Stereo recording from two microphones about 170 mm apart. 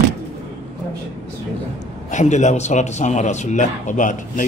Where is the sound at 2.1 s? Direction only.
45° left (ahead or behind).